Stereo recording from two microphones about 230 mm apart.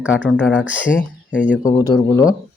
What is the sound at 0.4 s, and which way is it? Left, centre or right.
Speech, centre.